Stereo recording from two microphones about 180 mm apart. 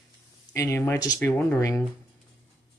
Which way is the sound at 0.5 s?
15° left (ahead or behind).